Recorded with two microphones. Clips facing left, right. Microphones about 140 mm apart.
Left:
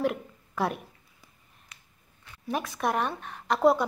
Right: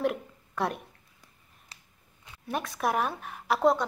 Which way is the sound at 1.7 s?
30° right (ahead or behind).